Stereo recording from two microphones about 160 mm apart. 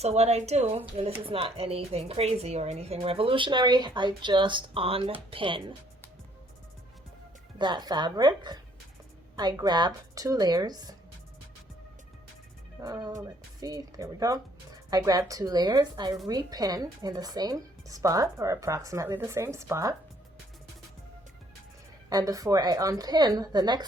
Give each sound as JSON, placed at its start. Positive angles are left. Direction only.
{"t": 0.0, "sound": "speech", "side_deg": -40}
{"t": 7.6, "sound": "speech", "side_deg": -25}
{"t": 12.8, "sound": "speech", "side_deg": -25}
{"t": 22.1, "sound": "speech", "side_deg": -20}